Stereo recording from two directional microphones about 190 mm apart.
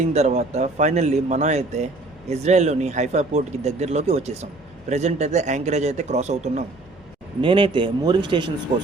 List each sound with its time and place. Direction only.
0.0 s speech: 35° right (ahead or behind)
7.4 s a man's voice: 25° right (ahead or behind)